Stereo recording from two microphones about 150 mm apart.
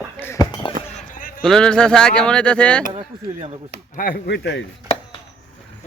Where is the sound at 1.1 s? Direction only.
70° left (ahead or behind).